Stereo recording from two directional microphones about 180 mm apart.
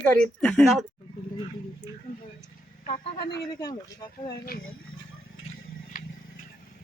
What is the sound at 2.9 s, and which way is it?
Speech, 25° left (ahead or behind).